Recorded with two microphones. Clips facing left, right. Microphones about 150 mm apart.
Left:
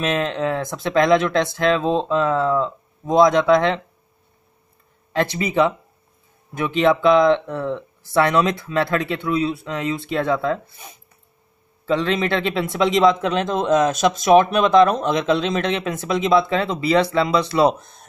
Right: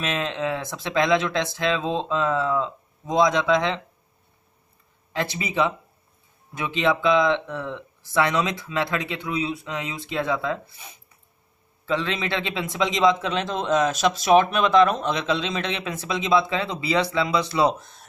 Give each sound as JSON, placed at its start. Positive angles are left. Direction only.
{"t": 0.0, "sound": "a man's voice", "side_deg": 45}
{"t": 5.1, "sound": "a man's voice", "side_deg": 60}